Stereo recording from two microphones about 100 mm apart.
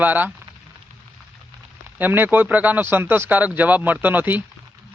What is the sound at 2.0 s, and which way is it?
Speech, 20° right (ahead or behind).